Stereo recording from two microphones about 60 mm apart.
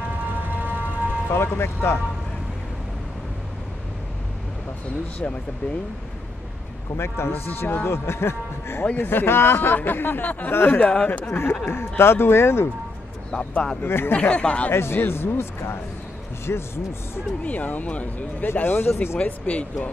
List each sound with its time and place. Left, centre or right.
0.4 s siren: right
1.3 s a man's voice: left
5.2 s speech: left
7.0 s a man's voice: left
10.8 s speech: left
11.6 s a man's voice: left
13.3 s speech: centre
13.8 s speech: left
14.1 s speech: centre
14.7 s a man's voice: left
17.4 s speech: left
18.5 s speech: left
19.2 s speech: left